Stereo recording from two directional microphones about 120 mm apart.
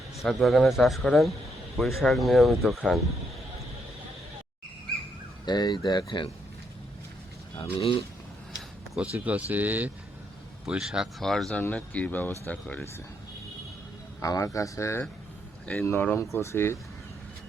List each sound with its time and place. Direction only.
0.2 s speech: centre (ahead or behind)
5.5 s speech: 35° left (ahead or behind)
7.6 s speech: 50° left (ahead or behind)
9.0 s speech: 10° right (ahead or behind); by 12.9 s 15° left (ahead or behind)
14.2 s speech: 30° left (ahead or behind)